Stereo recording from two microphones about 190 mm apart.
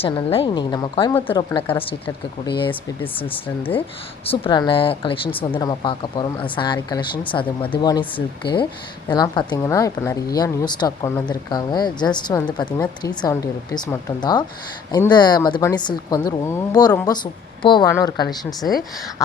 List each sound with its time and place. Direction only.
0.0 s speech: 30° left (ahead or behind)
4.3 s speech: 25° left (ahead or behind)